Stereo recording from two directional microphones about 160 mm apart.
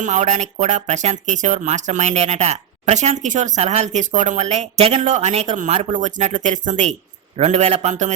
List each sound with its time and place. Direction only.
0.0 s speech: 50° right (ahead or behind)